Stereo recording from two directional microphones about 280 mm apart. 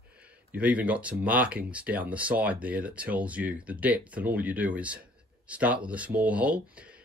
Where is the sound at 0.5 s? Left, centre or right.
Centre.